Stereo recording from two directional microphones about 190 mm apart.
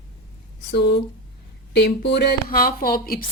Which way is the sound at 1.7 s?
65° left (ahead or behind).